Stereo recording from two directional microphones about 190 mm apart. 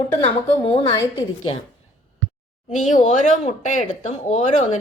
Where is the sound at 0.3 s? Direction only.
30° left (ahead or behind).